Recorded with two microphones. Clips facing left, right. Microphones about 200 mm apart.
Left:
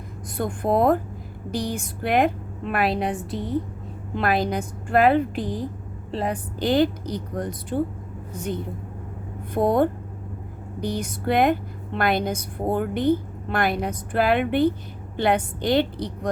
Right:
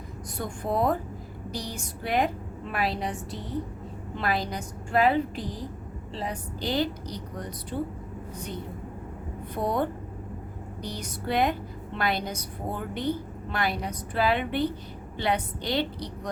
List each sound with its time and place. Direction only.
0.3 s a woman's voice: 55° left (ahead or behind)
4.2 s a woman's voice: 60° left (ahead or behind)
9.6 s a woman's voice: 50° left (ahead or behind)